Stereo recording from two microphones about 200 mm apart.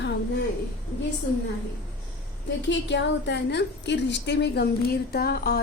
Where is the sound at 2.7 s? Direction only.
60° left (ahead or behind).